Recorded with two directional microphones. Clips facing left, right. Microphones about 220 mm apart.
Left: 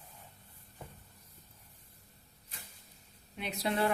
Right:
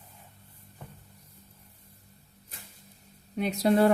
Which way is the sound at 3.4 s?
40° right (ahead or behind).